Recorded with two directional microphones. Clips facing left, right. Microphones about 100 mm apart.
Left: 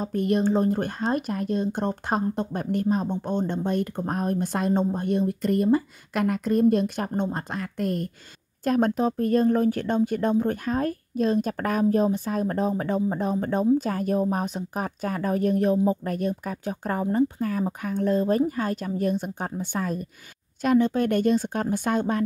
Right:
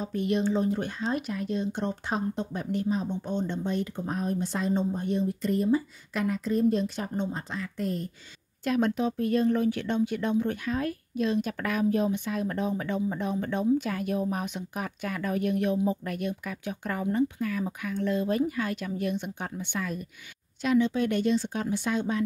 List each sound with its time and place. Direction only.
0.0 s speech: 45° left (ahead or behind)
8.6 s speech: 40° left (ahead or behind)